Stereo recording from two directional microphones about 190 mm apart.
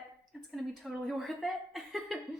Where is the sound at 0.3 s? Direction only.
Centre (ahead or behind).